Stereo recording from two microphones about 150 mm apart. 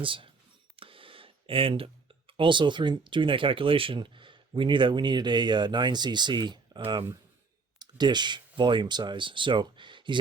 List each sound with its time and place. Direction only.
0.0 s speech: 35° right (ahead or behind)